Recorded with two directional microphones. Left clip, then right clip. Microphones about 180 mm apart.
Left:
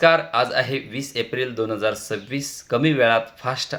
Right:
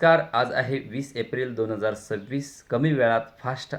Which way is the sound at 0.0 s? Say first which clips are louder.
Left 3 dB; 15° left (ahead or behind).